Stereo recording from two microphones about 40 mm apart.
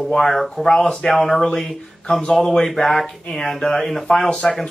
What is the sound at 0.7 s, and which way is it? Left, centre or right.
Speech, centre.